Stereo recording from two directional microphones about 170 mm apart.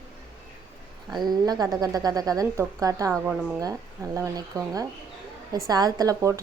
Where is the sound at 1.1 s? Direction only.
25° right (ahead or behind).